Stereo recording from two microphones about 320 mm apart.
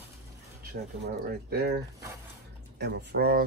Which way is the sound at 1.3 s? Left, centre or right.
Right.